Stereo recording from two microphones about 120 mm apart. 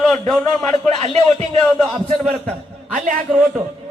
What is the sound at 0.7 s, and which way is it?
Speech, 65° right (ahead or behind).